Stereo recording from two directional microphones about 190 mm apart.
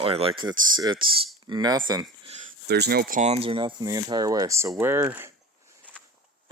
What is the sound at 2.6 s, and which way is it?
Speech, 60° right (ahead or behind).